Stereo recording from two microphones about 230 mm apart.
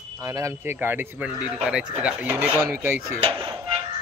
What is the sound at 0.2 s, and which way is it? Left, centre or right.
Speech, centre.